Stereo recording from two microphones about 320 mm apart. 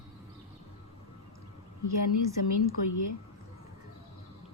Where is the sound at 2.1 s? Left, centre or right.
Left.